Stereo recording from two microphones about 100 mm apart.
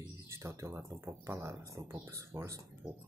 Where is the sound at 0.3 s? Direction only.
30° right (ahead or behind).